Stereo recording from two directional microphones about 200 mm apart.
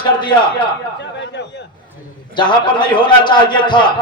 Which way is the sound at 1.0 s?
60° left (ahead or behind).